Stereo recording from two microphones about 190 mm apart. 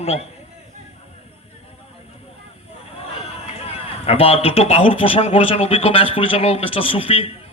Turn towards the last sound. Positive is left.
turn(degrees=30)  # may be behind; listen again after turning